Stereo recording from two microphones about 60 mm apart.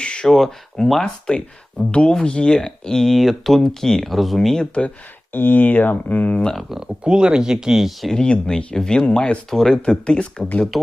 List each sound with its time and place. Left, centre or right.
0.0 s a sound: centre
0.3 s speech: centre
1.8 s speech: centre
5.3 s speech: left
6.5 s speech: centre
6.7 s speech: centre
8.1 s speech: centre
9.5 s speech: centre